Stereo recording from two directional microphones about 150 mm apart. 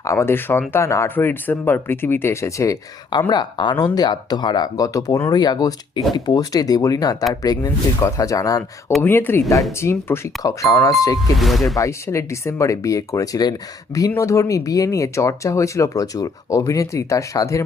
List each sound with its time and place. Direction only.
0.0 s speech: 20° left (ahead or behind)
9.0 s speech: 15° left (ahead or behind)
11.3 s speech: centre (ahead or behind)
11.8 s speech: 20° left (ahead or behind)